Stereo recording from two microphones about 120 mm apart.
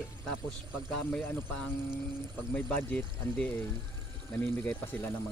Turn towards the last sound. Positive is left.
turn(degrees=15)  # may be behind; listen again after turning